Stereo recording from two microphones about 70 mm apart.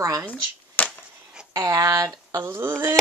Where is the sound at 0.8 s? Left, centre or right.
Left.